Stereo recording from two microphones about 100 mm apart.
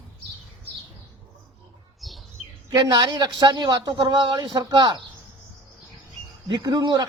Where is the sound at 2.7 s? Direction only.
45° right (ahead or behind).